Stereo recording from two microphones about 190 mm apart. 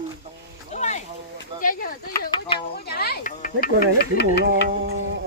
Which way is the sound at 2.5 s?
30° left (ahead or behind).